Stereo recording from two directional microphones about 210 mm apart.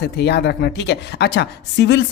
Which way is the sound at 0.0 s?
50° left (ahead or behind).